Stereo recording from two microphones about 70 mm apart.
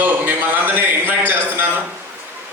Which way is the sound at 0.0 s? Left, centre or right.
Right.